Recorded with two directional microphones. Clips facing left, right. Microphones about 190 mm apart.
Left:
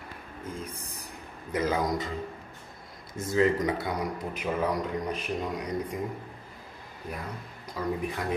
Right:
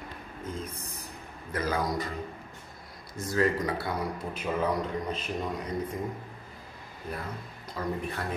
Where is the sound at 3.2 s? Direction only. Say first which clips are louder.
Left 3 dB; 20° left (ahead or behind).